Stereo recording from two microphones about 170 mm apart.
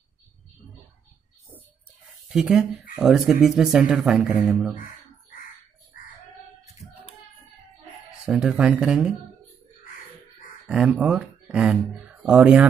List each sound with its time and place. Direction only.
2.2 s speech: 5° right (ahead or behind)
5.9 s bird: 55° left (ahead or behind)
8.1 s speech: 5° right (ahead or behind)
10.7 s speech: 5° right (ahead or behind)